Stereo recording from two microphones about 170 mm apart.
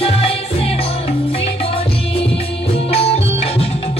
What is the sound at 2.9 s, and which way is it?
Music, 35° left (ahead or behind).